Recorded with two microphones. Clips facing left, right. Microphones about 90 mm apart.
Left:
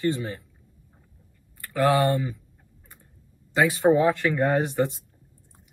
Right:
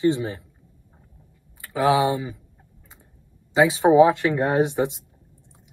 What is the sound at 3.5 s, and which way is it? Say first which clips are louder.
Speech: right 4 dB; 15° right (ahead or behind).